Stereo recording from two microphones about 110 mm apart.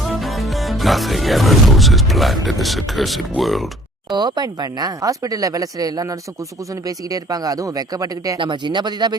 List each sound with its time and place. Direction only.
0.0 s speech: centre (ahead or behind)
4.1 s speech: 40° right (ahead or behind)
8.4 s speech: 45° right (ahead or behind)